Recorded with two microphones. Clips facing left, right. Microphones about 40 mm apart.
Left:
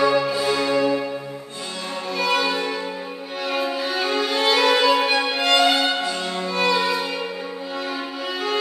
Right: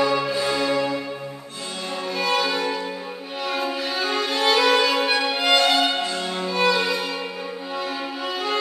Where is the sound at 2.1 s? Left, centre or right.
Centre.